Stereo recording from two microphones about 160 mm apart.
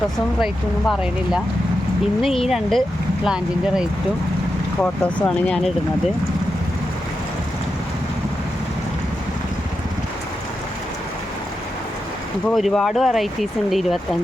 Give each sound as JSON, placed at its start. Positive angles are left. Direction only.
{"t": 0.4, "sound": "speech", "side_deg": -5}
{"t": 2.5, "sound": "speech", "side_deg": 0}
{"t": 4.8, "sound": "speech", "side_deg": 10}
{"t": 12.5, "sound": "speech", "side_deg": 0}